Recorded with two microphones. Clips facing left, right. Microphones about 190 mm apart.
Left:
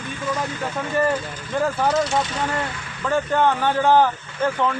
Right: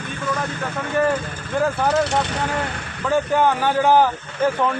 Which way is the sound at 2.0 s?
60° right (ahead or behind).